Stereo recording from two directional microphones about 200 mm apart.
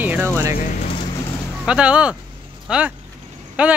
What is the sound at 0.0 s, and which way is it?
Music, 10° right (ahead or behind).